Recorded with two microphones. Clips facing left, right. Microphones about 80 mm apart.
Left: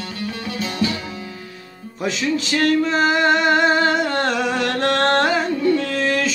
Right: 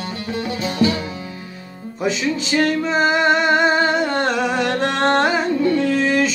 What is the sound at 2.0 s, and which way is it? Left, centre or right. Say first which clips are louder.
Music: right 1 dB; centre.